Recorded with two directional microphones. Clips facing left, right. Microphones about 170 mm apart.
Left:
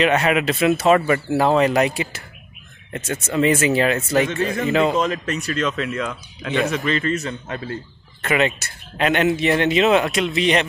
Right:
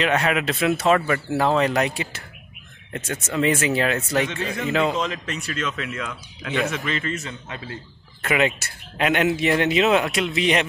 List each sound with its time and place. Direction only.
0.0 s speech: 5° left (ahead or behind)
4.2 s speech: 45° left (ahead or behind)
4.6 s speech: centre (ahead or behind)
4.9 s speech: 45° left (ahead or behind)
8.2 s speech: 5° right (ahead or behind)